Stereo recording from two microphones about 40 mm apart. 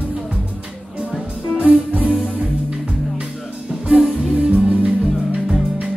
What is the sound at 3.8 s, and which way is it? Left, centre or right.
Music, right.